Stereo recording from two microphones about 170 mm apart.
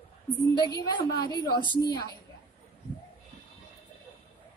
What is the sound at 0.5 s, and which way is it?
Speech, 25° left (ahead or behind).